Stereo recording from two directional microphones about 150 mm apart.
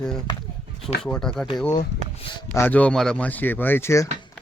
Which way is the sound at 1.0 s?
5° left (ahead or behind).